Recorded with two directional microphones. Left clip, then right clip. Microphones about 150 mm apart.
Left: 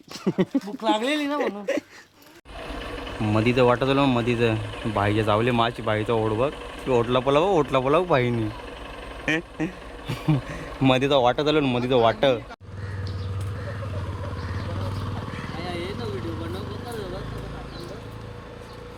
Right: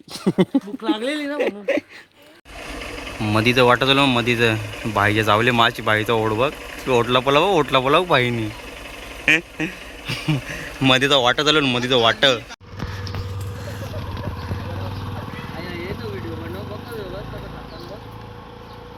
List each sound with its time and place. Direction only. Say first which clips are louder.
0.1 s speech: right 5 dB; 50° right (ahead or behind)
0.9 s speech: left 3 dB; 10° left (ahead or behind)
1.4 s speech: right 4 dB; 35° right (ahead or behind)
3.2 s speech: right 4 dB; centre (ahead or behind)